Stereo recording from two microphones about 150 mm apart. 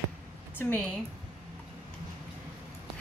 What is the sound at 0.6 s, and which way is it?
Speech, 15° left (ahead or behind).